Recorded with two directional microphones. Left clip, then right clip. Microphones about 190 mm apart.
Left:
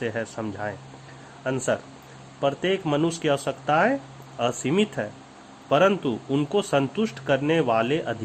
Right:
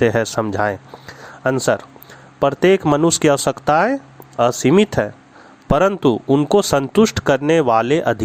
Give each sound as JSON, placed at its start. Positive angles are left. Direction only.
{"t": 0.0, "sound": "speech", "side_deg": -40}